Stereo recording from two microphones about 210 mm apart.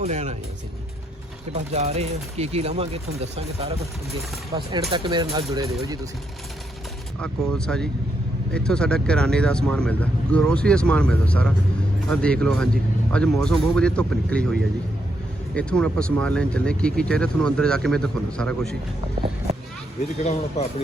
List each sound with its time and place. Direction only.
0.0 s speech: 30° right (ahead or behind)
1.7 s speech: 30° right (ahead or behind)
7.2 s speech: 5° left (ahead or behind)
15.5 s speech: 5° left (ahead or behind)
20.2 s speech: 30° left (ahead or behind)